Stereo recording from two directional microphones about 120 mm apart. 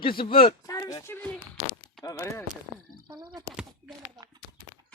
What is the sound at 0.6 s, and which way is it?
Speech, 25° left (ahead or behind).